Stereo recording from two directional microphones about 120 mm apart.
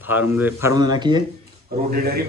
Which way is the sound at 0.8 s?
35° right (ahead or behind).